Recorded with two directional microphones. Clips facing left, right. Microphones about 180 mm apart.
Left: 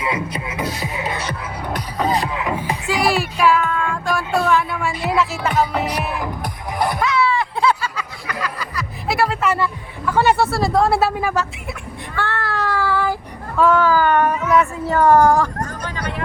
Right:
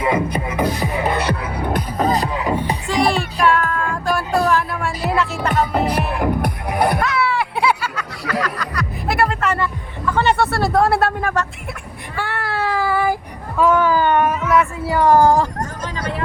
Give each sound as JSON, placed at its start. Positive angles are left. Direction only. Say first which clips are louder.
{"t": 0.0, "sound": "music", "louder": "right 5 dB", "side_deg": -55}
{"t": 2.8, "sound": "music", "louder": "left 1 dB", "side_deg": 5}
{"t": 5.7, "sound": "music", "louder": "right 3 dB", "side_deg": -55}
{"t": 7.0, "sound": "a sound", "louder": "left 1 dB", "side_deg": 0}
{"t": 8.4, "sound": "music", "louder": "right 3 dB", "side_deg": 5}
{"t": 10.1, "sound": "a sound", "louder": "left 1 dB", "side_deg": 5}
{"t": 12.1, "sound": "child singing", "louder": "even", "side_deg": -15}
{"t": 13.6, "sound": "a sound", "louder": "even", "side_deg": -15}
{"t": 14.3, "sound": "child singing", "louder": "even", "side_deg": 0}
{"t": 15.0, "sound": "speech", "louder": "even", "side_deg": -30}
{"t": 16.0, "sound": "vehicle", "louder": "right 3 dB", "side_deg": -25}